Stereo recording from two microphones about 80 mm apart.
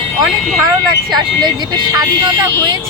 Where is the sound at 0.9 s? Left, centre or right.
Right.